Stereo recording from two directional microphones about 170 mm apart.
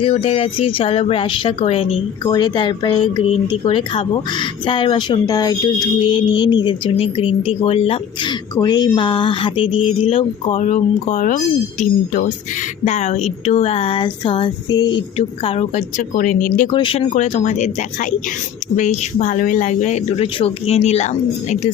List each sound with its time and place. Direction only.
0.0 s speech: 35° left (ahead or behind)
12.8 s speech: 40° left (ahead or behind); by 15.0 s 25° left (ahead or behind)
15.4 s speech: 40° left (ahead or behind)
16.7 s speech: 30° left (ahead or behind)
17.2 s speech: 40° left (ahead or behind)